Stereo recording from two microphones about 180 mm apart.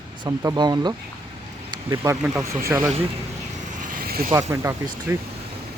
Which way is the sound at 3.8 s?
50° right (ahead or behind).